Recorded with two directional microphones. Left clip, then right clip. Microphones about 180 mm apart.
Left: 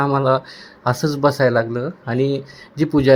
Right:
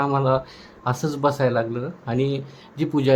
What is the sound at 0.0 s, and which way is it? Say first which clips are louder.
Speech: left 4 dB; 20° left (ahead or behind).